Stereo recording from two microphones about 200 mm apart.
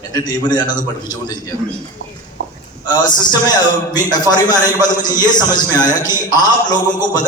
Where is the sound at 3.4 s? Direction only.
20° left (ahead or behind).